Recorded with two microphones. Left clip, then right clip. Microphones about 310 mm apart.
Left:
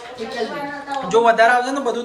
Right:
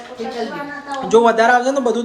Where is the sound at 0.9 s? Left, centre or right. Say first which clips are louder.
Right 2 dB; centre.